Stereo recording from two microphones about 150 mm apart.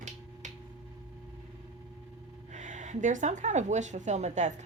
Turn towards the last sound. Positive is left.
turn(degrees=-50)  # may be behind; listen again after turning